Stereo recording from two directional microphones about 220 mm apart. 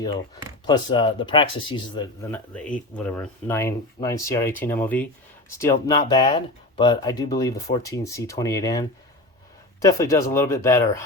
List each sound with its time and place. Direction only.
0.7 s speech: 20° left (ahead or behind)
2.3 s speech: 5° left (ahead or behind)